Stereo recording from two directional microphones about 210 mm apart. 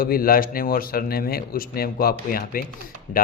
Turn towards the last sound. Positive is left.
turn(degrees=40)  # may be behind; listen again after turning